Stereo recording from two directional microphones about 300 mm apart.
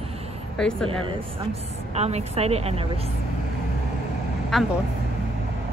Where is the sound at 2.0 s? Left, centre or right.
Right.